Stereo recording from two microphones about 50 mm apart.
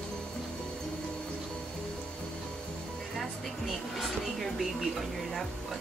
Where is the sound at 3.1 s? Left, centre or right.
Centre.